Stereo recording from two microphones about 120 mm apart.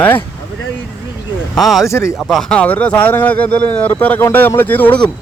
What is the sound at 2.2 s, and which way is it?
Speech, centre (ahead or behind).